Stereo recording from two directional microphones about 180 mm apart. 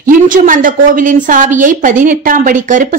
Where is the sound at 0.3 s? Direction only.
50° right (ahead or behind).